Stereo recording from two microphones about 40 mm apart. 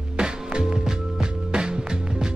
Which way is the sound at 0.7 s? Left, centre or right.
Centre.